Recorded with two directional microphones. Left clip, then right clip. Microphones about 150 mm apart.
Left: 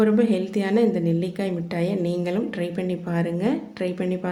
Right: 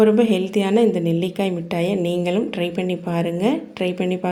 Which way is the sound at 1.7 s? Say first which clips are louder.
Right 3 dB; 15° right (ahead or behind).